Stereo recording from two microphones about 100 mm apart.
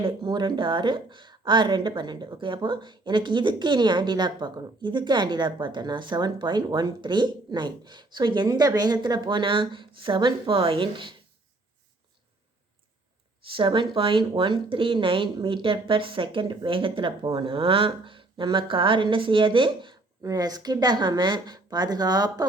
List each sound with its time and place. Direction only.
0.0 s a woman's voice: 50° right (ahead or behind)
13.6 s speech: 55° right (ahead or behind)
20.2 s a woman's voice: 40° right (ahead or behind)